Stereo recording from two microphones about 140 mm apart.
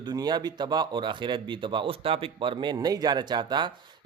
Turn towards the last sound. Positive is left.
turn(degrees=-30)  # may be behind; listen again after turning